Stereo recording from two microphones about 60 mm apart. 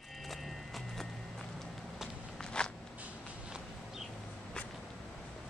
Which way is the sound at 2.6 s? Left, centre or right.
Centre.